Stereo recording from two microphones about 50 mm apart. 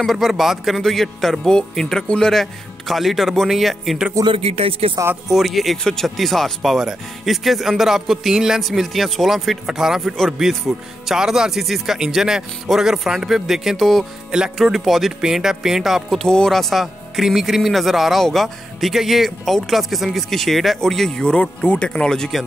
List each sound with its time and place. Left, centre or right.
0.0 s a man's voice: centre
2.4 s speech: centre
5.3 s speech: centre
16.3 s a man's voice: centre